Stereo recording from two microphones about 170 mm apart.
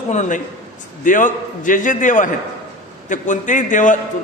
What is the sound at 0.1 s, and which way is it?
A man's voice, 45° left (ahead or behind).